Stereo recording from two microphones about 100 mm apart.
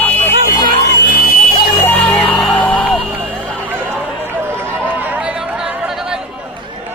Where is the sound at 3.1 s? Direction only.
15° right (ahead or behind).